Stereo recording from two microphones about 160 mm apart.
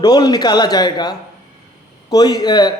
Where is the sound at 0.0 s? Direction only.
25° left (ahead or behind).